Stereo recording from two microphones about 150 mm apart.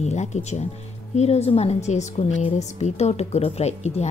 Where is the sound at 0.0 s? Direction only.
50° left (ahead or behind).